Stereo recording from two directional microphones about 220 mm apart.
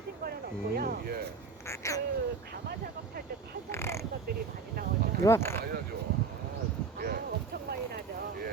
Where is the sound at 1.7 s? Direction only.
15° left (ahead or behind).